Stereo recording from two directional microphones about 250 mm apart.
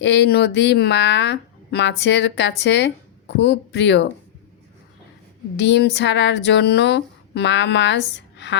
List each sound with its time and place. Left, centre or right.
0.0 s speech: left
5.5 s speech: left